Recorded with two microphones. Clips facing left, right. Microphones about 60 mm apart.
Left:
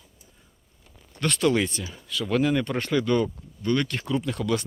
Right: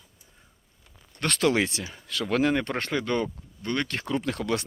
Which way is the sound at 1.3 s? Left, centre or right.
Right.